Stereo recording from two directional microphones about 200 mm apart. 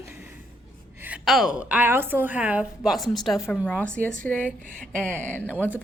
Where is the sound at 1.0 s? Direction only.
5° right (ahead or behind).